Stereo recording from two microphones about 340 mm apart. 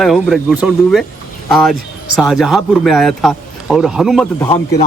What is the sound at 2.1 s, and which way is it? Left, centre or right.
Speech, centre.